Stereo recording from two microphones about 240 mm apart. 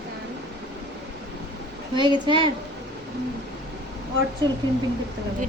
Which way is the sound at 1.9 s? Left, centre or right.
Centre.